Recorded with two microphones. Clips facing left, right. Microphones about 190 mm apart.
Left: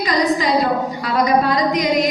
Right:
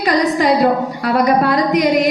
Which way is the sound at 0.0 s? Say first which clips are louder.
Right 3 dB; 60° right (ahead or behind).